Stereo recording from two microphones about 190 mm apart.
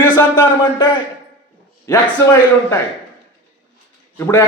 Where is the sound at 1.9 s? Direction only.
15° left (ahead or behind).